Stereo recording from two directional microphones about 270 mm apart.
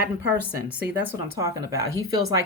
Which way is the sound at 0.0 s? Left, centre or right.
Right.